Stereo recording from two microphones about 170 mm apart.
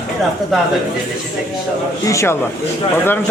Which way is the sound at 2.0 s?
15° left (ahead or behind).